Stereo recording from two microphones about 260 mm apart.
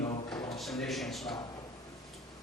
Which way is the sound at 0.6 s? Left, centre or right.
Centre.